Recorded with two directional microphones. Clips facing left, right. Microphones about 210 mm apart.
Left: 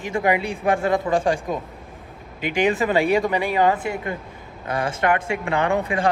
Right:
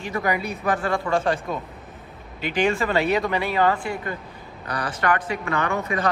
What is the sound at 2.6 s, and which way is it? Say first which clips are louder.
A man's voice: left 2 dB; 15° left (ahead or behind).